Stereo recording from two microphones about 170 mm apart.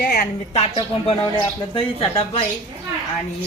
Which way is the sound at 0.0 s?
55° left (ahead or behind).